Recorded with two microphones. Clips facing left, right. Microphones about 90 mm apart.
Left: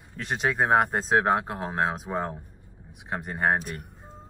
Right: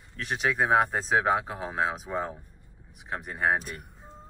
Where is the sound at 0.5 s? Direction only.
15° left (ahead or behind).